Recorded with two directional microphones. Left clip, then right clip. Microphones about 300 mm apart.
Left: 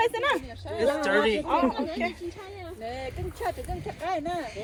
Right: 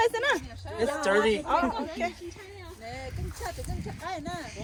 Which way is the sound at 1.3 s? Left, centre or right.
Right.